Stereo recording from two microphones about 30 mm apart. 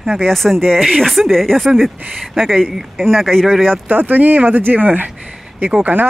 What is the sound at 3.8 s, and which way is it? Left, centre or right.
Speech, right.